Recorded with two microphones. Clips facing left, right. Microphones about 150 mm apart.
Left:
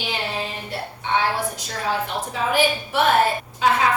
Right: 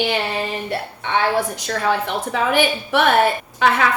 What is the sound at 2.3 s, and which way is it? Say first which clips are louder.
A woman's voice: right 2 dB; 65° right (ahead or behind).